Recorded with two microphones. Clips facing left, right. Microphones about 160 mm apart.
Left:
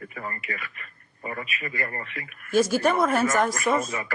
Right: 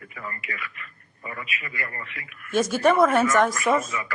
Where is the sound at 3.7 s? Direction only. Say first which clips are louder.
Right 1 dB; 30° left (ahead or behind).